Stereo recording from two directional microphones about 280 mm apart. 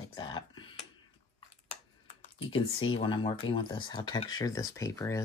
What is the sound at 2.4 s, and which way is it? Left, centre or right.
Speech, centre.